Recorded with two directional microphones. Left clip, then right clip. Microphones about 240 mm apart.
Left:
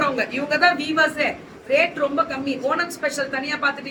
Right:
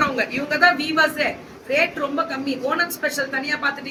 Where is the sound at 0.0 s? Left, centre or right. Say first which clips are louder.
Right 1 dB; centre.